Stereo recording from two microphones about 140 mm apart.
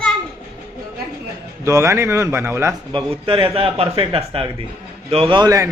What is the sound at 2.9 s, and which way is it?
A man's voice, 40° right (ahead or behind).